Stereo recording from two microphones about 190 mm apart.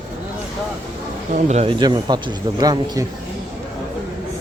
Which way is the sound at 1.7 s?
20° right (ahead or behind).